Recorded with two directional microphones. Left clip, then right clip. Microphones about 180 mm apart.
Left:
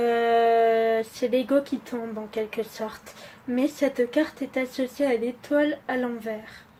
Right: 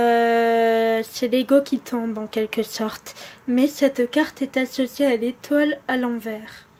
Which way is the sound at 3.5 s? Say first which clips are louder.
Right 6 dB; 30° right (ahead or behind).